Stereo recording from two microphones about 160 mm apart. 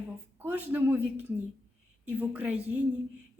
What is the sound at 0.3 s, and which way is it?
A man's voice, 10° right (ahead or behind).